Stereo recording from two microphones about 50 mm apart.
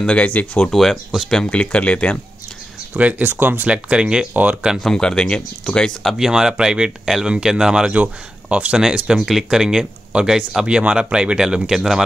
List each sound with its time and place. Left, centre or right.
0.0 s speech: left
0.7 s speech: centre
1.5 s speech: left
2.9 s speech: right
3.3 s speech: right
3.6 s speech: right
4.3 s speech: right
4.7 s speech: centre
6.1 s speech: centre
7.9 s speech: right; by 12.0 s centre